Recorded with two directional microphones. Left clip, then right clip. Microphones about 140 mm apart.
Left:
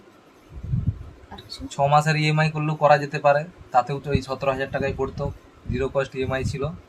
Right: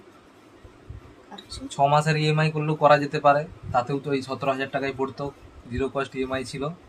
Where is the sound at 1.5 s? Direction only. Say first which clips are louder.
Even; 15° left (ahead or behind).